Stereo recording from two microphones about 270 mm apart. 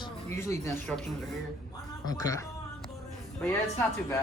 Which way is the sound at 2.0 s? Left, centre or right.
Centre.